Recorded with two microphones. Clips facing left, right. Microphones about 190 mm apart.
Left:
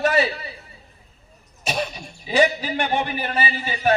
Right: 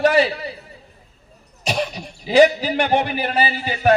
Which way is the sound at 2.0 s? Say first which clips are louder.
Right 7 dB; 40° right (ahead or behind).